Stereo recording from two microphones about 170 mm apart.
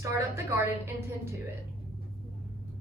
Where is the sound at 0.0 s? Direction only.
15° right (ahead or behind).